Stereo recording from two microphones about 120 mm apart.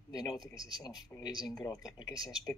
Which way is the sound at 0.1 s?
35° left (ahead or behind).